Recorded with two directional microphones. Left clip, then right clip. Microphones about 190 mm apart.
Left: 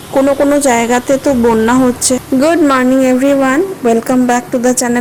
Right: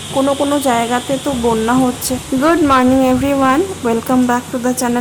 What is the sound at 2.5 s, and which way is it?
A woman's voice, 15° left (ahead or behind).